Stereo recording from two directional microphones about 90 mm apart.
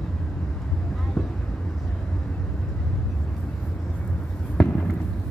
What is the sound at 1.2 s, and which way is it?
Vehicle, 5° left (ahead or behind).